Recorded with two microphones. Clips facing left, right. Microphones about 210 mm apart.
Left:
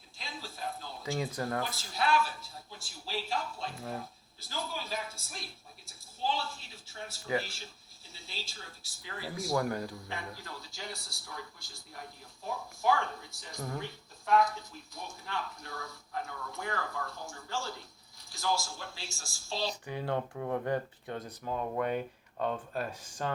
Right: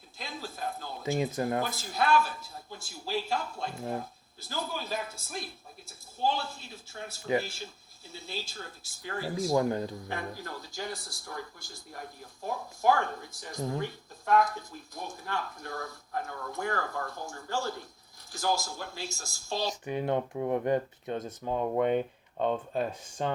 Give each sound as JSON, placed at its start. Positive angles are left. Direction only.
{"t": 0.2, "sound": "a sound", "side_deg": -45}
{"t": 1.0, "sound": "speech", "side_deg": -20}
{"t": 1.6, "sound": "speech", "side_deg": -45}
{"t": 7.3, "sound": "speech", "side_deg": -20}
{"t": 8.1, "sound": "speech", "side_deg": -45}
{"t": 9.5, "sound": "speech", "side_deg": -20}
{"t": 10.4, "sound": "speech", "side_deg": -45}
{"t": 19.8, "sound": "speech", "side_deg": -20}